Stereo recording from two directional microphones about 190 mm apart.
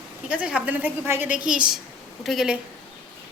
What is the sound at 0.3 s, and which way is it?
A woman's voice, 5° right (ahead or behind).